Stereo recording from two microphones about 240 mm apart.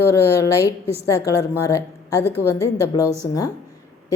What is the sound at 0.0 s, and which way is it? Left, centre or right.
A woman's voice, centre.